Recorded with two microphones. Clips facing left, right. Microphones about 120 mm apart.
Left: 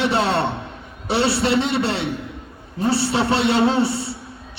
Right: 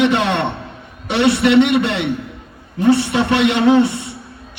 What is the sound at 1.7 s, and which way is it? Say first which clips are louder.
A man's voice: right 4 dB; 30° left (ahead or behind).